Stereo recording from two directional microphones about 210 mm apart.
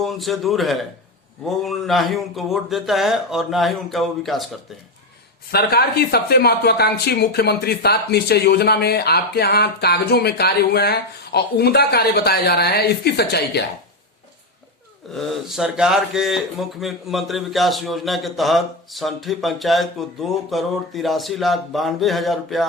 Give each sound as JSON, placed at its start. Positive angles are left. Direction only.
{"t": 0.0, "sound": "speech", "side_deg": 0}
{"t": 5.5, "sound": "speech", "side_deg": 45}
{"t": 15.1, "sound": "speech", "side_deg": 0}